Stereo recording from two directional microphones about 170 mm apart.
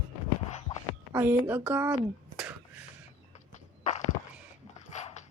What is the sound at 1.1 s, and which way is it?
A woman's voice, 10° right (ahead or behind).